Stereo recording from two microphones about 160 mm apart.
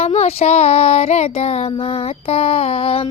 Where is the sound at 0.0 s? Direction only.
40° left (ahead or behind).